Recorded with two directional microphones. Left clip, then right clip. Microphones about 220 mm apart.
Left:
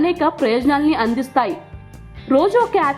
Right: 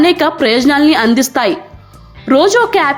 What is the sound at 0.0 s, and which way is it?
A woman's voice, 25° right (ahead or behind).